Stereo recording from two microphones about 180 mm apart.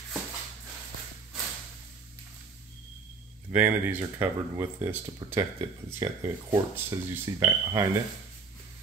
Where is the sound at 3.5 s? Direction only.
10° right (ahead or behind).